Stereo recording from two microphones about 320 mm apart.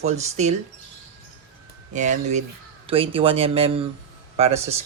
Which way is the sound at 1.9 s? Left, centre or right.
Right.